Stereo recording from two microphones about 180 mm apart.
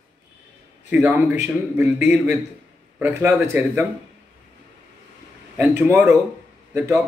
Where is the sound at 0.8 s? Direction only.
10° right (ahead or behind).